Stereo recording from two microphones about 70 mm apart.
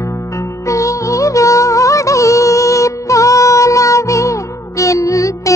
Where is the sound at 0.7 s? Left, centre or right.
Left.